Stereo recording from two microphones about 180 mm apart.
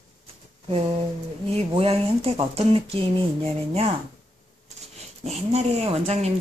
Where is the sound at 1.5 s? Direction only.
35° right (ahead or behind).